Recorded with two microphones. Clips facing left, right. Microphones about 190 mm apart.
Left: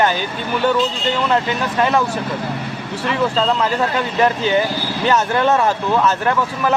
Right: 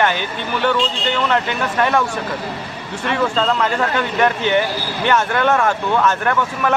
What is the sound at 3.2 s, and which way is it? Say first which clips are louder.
Speech: left 1 dB; 5° left (ahead or behind).